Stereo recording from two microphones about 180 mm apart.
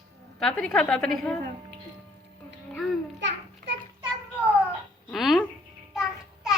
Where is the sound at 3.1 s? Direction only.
80° right.